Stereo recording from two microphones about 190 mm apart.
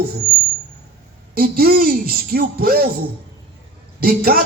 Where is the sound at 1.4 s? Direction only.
55° right (ahead or behind).